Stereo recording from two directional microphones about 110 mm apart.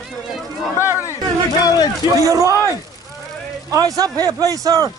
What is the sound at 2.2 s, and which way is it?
Speech, 30° right (ahead or behind).